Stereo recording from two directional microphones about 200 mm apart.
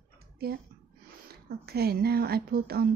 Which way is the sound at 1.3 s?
50° right (ahead or behind).